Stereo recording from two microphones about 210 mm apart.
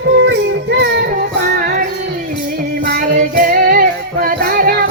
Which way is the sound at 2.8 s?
45° right (ahead or behind).